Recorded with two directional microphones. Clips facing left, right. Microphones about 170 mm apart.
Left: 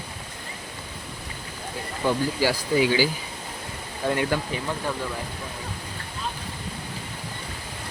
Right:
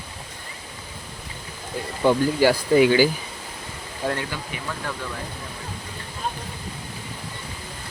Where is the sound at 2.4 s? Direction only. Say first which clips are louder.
Right 6 dB; 50° right (ahead or behind).